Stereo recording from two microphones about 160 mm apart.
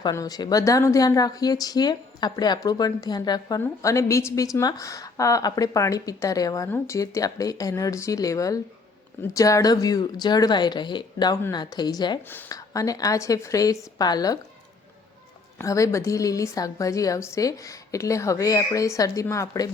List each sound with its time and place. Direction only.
0.0 s a woman's voice: 20° left (ahead or behind)
15.5 s a woman's voice: 20° left (ahead or behind)